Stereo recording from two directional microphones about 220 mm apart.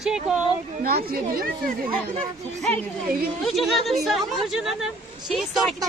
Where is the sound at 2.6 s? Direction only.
Centre (ahead or behind).